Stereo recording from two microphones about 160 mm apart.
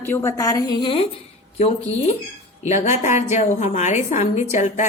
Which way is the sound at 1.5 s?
40° left (ahead or behind).